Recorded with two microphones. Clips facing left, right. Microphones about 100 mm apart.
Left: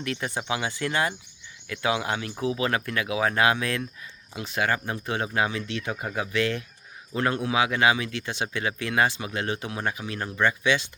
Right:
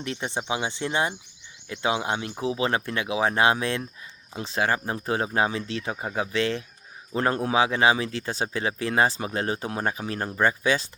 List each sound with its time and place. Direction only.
0.0 s speech: 25° right (ahead or behind)